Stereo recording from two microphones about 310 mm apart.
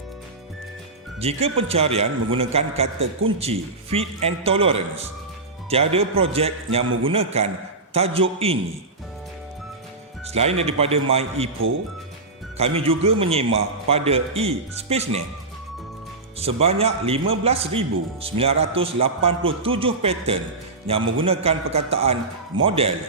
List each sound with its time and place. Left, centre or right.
1.2 s a man's voice: centre
10.2 s a man's voice: centre
12.5 s a man's voice: centre
16.4 s a man's voice: centre